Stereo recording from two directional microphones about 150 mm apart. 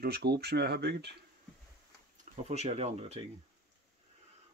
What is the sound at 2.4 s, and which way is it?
Speech, 45° right (ahead or behind).